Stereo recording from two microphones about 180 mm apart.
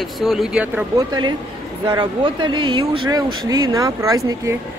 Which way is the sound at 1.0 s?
25° right (ahead or behind).